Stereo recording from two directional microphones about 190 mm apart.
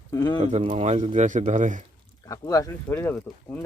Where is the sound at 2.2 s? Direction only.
20° left (ahead or behind).